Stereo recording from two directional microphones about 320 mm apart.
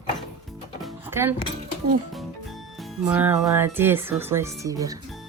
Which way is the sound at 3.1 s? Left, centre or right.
Centre.